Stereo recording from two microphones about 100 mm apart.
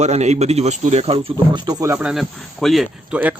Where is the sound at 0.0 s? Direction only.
90° right.